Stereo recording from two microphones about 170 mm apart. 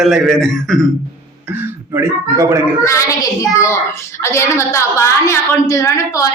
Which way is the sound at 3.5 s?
15° left (ahead or behind).